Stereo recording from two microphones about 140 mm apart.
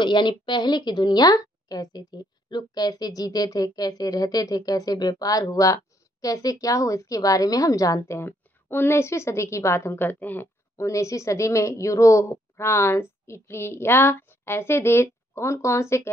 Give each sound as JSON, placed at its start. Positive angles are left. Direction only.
{"t": 0.0, "sound": "a woman's voice", "side_deg": 35}